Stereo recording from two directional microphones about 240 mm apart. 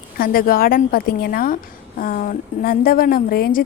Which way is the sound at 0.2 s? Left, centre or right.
Left.